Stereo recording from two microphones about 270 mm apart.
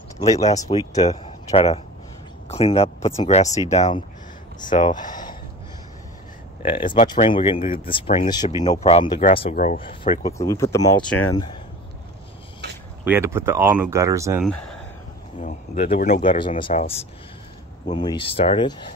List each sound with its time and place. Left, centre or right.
0.2 s speech: centre
6.6 s speech: centre
13.0 s speech: centre
14.4 s speech: centre
15.4 s speech: left